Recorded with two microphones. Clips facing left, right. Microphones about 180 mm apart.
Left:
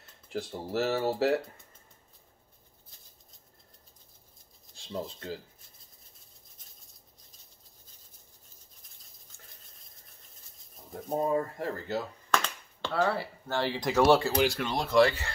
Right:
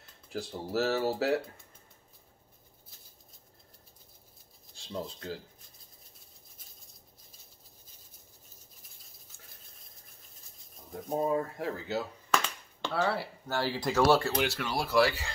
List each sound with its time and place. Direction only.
0.3 s speech: centre (ahead or behind)
4.7 s speech: centre (ahead or behind)
10.9 s speech: centre (ahead or behind)
13.8 s speech: 15° left (ahead or behind)
14.2 s speech: centre (ahead or behind)